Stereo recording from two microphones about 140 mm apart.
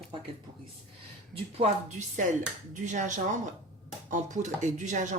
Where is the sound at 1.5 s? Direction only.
55° right (ahead or behind).